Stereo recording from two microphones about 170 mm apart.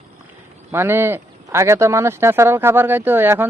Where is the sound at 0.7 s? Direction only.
15° right (ahead or behind).